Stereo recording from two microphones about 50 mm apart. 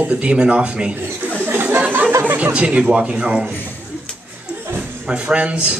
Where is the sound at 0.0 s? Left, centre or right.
Right.